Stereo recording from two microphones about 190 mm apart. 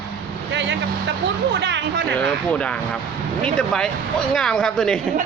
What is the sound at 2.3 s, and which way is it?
Speech, 5° left (ahead or behind).